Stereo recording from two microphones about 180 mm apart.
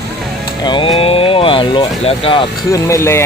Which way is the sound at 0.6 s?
25° left (ahead or behind).